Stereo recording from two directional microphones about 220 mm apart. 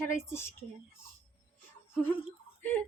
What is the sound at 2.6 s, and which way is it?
Speech, 10° left (ahead or behind).